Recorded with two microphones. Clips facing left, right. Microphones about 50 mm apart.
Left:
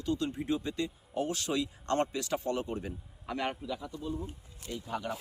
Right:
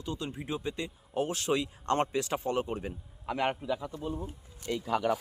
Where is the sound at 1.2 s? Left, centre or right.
Right.